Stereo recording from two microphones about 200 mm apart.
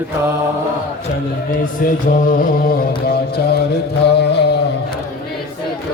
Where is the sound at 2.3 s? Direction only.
45° left (ahead or behind).